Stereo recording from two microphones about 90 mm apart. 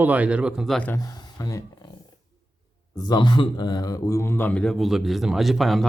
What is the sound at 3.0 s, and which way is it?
Speech, 50° left (ahead or behind).